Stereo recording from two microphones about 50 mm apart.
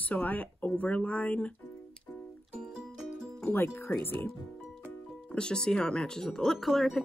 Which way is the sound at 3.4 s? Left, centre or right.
Left.